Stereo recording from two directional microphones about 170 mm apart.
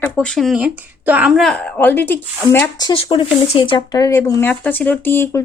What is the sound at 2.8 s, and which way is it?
Speech, 25° left (ahead or behind).